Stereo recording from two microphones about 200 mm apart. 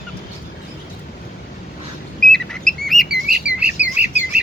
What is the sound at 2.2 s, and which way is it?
Bird, 5° left (ahead or behind).